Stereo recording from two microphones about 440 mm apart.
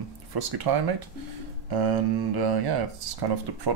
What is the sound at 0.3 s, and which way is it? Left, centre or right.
Speech, right.